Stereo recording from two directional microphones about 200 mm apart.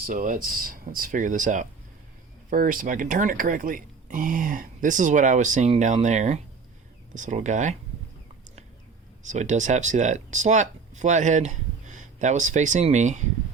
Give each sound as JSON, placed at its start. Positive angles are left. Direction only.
{"t": 0.0, "sound": "speech", "side_deg": -40}
{"t": 9.2, "sound": "speech", "side_deg": -35}